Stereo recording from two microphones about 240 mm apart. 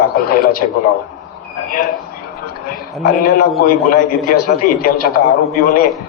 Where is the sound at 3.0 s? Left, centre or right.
Left.